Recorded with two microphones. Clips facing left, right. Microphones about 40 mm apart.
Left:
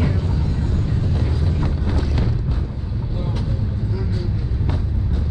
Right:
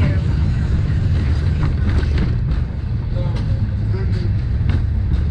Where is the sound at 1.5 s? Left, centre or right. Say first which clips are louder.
Right 1 dB; centre.